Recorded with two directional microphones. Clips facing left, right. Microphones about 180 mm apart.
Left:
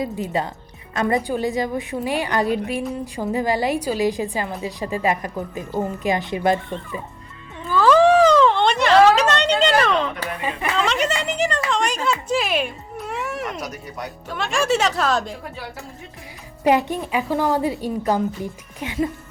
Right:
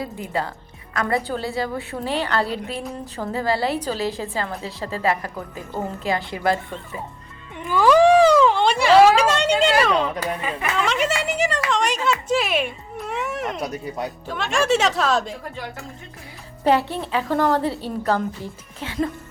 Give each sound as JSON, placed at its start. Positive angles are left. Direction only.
{"t": 0.0, "sound": "a woman's voice", "side_deg": 20}
{"t": 7.6, "sound": "cat", "side_deg": -15}
{"t": 10.8, "sound": "speech", "side_deg": 0}
{"t": 12.0, "sound": "a sound", "side_deg": 0}
{"t": 13.6, "sound": "speech", "side_deg": -30}
{"t": 14.3, "sound": "speech", "side_deg": 0}
{"t": 16.6, "sound": "a woman's voice", "side_deg": 15}